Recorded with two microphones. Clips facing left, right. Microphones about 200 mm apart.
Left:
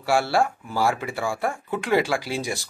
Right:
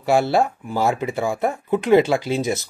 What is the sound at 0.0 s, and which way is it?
Speech, 20° right (ahead or behind).